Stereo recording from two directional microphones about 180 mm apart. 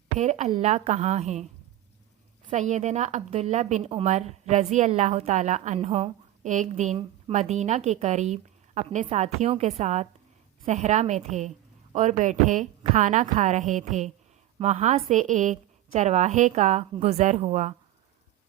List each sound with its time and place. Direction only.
0.2 s a woman's voice: 40° right (ahead or behind)
2.5 s a woman's voice: 40° right (ahead or behind)